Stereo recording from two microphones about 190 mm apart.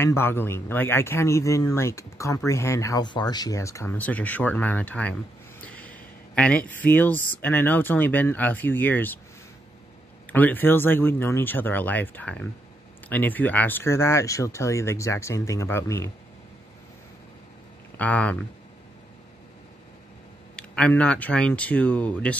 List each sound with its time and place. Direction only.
0.0 s speech: 10° left (ahead or behind)
10.3 s speech: 10° left (ahead or behind)
17.9 s speech: 10° left (ahead or behind)
20.5 s speech: 5° left (ahead or behind)